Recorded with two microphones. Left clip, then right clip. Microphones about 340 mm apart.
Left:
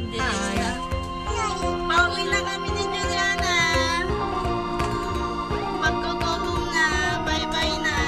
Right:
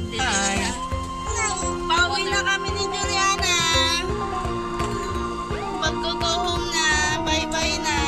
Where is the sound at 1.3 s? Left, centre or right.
Centre.